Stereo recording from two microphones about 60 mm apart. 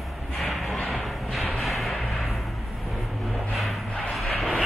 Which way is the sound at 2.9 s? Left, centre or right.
Centre.